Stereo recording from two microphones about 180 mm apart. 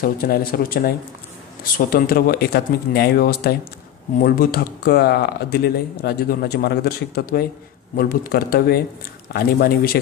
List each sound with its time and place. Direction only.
0.0 s speech: 55° left (ahead or behind)